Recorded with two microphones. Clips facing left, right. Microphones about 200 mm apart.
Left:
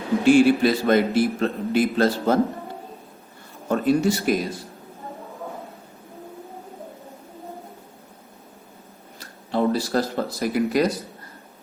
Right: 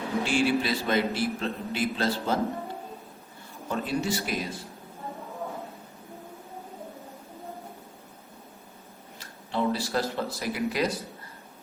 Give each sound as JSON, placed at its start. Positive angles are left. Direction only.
{"t": 0.3, "sound": "a man's voice", "side_deg": 50}
{"t": 3.7, "sound": "a man's voice", "side_deg": 45}
{"t": 9.1, "sound": "speech", "side_deg": 40}